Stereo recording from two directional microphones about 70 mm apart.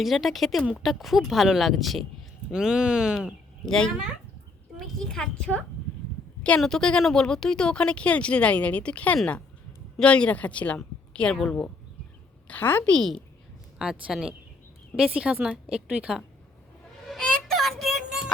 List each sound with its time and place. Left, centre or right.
0.0 s speech: centre
3.7 s speech: centre
4.9 s speech: centre
12.5 s speech: left
13.7 s speech: centre
17.1 s child singing: centre